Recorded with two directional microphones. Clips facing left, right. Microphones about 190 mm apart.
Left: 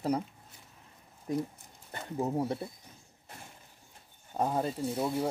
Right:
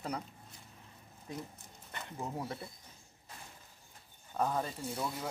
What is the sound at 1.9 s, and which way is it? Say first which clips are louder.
Speech: left 9 dB; 35° left (ahead or behind).